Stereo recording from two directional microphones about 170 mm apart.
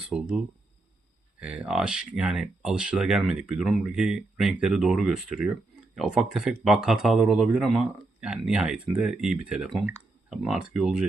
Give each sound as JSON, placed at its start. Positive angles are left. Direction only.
{"t": 0.1, "sound": "speech", "side_deg": -5}